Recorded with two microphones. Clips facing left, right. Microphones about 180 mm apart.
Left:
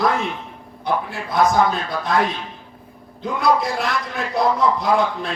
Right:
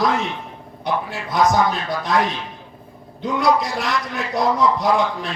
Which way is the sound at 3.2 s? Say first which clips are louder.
Even; 55° left (ahead or behind).